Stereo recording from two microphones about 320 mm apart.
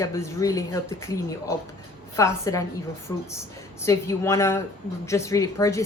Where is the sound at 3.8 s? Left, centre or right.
Centre.